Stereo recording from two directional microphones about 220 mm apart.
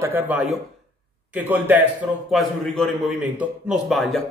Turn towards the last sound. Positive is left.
turn(degrees=0)  # may be behind; listen again after turning